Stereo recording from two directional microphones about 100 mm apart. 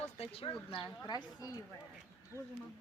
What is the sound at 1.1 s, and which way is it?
Speech, 40° left (ahead or behind).